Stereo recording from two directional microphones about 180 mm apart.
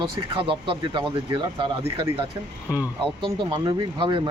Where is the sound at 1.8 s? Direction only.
15° right (ahead or behind).